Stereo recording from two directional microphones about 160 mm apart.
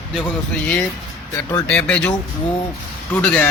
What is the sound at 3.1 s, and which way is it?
Speech, 10° left (ahead or behind).